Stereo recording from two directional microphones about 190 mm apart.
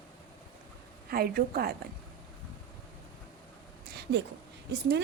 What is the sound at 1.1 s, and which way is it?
Speech, 50° right (ahead or behind).